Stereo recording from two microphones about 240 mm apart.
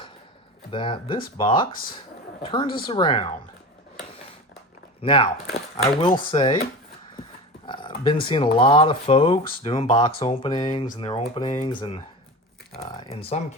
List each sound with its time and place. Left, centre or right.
0.7 s speech: left
4.9 s speech: left
7.7 s speech: centre